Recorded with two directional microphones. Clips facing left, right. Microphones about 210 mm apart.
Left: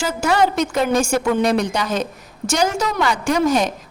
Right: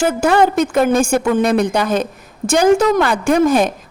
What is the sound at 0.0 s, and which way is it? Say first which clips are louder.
A woman's voice: right 5 dB; 55° right (ahead or behind).